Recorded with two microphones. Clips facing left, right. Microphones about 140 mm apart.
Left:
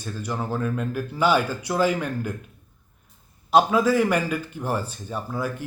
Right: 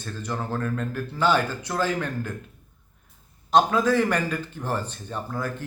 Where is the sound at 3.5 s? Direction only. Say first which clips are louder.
Left 1 dB; 10° left (ahead or behind).